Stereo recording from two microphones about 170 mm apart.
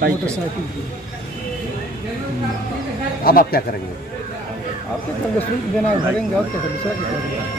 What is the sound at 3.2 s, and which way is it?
Speech, 60° left (ahead or behind).